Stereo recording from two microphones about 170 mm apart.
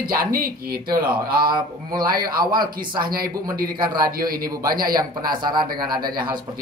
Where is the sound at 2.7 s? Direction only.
25° right (ahead or behind).